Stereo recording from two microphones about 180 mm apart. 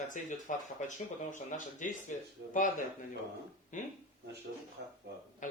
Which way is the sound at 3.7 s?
45° left (ahead or behind).